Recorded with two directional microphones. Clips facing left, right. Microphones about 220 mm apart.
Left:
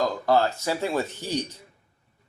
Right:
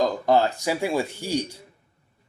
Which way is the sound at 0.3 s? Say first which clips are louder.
Right 1 dB; 15° right (ahead or behind).